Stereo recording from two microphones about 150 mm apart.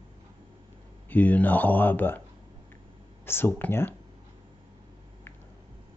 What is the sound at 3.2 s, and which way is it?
Speech, 15° left (ahead or behind).